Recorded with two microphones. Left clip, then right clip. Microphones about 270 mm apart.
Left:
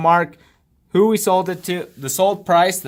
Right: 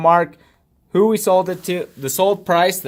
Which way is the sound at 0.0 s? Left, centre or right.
Left.